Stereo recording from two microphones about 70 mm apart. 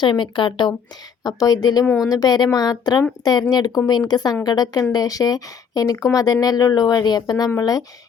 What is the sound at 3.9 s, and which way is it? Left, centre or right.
Speech, left.